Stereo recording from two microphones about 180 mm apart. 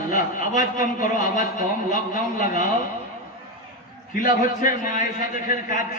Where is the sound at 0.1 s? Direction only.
50° left (ahead or behind).